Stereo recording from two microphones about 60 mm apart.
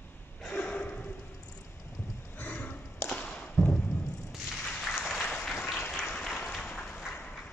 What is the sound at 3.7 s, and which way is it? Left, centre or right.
Music, left.